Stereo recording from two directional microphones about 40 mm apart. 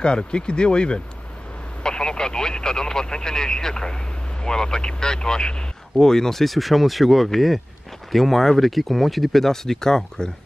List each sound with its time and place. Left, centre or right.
0.0 s speech: left